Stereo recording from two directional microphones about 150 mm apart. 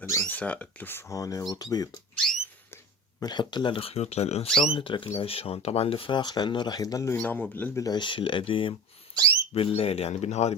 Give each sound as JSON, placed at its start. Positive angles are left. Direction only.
{"t": 0.3, "sound": "speech", "side_deg": 10}
{"t": 3.2, "sound": "speech", "side_deg": 30}
{"t": 7.9, "sound": "speech", "side_deg": 30}